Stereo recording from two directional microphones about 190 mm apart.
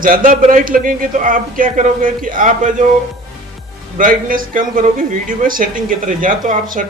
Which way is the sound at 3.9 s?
45° right (ahead or behind).